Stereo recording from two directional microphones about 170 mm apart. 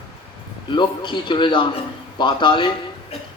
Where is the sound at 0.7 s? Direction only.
25° left (ahead or behind).